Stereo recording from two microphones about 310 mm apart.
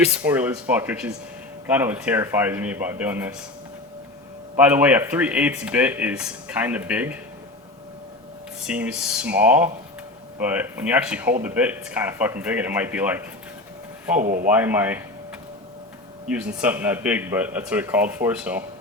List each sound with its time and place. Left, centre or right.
0.2 s speech: centre
4.5 s speech: centre
8.6 s speech: centre
14.2 s a man's voice: right
14.5 s speech: centre
16.3 s speech: centre